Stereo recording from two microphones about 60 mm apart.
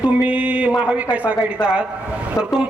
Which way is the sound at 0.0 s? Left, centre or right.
Right.